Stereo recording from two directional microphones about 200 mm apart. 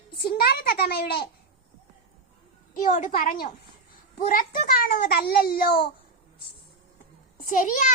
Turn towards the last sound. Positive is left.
turn(degrees=40)  # may be behind; listen again after turning